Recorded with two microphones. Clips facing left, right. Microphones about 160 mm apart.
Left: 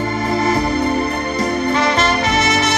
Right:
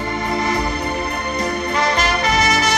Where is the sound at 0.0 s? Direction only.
30° left (ahead or behind).